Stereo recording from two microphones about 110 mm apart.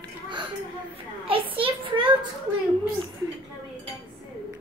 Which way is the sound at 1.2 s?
55° right (ahead or behind).